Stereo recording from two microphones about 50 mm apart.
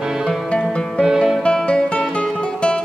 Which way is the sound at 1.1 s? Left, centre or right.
Centre.